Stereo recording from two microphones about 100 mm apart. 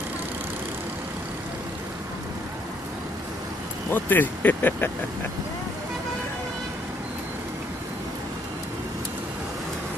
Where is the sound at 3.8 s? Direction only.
20° left (ahead or behind).